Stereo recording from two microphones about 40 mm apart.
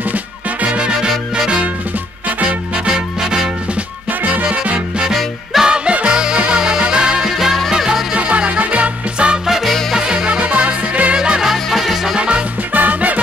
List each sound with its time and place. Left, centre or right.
0.7 s music: right
2.2 s music: right
2.9 s music: centre
4.2 s music: right
5.5 s music: centre
5.9 s music: right
7.2 s music: centre
8.1 s music: right
9.7 s music: centre
9.9 s music: right
11.1 s music: centre
11.5 s music: centre
12.2 s music: right
12.7 s music: right